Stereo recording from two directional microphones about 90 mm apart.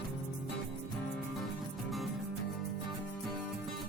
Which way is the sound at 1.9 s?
Centre (ahead or behind).